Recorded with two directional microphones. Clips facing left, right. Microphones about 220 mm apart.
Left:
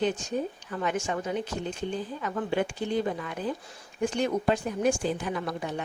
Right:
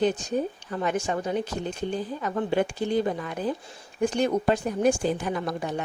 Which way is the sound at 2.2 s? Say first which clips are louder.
Right 3 dB; 40° right (ahead or behind).